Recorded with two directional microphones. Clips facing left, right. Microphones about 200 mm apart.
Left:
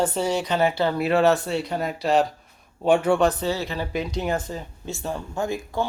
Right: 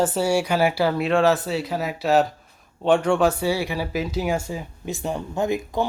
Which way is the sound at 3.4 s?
10° right (ahead or behind).